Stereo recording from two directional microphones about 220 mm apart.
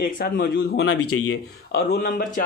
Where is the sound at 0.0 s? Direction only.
40° left (ahead or behind).